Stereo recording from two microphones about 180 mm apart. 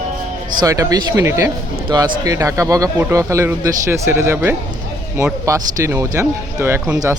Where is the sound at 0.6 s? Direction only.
20° right (ahead or behind).